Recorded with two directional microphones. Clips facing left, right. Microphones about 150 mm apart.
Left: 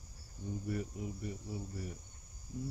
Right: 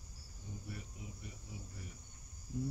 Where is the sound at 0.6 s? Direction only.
50° left (ahead or behind).